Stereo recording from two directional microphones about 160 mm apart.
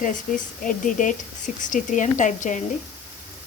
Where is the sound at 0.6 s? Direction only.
55° left (ahead or behind).